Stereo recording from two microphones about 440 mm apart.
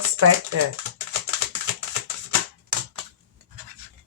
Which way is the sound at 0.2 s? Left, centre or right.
Right.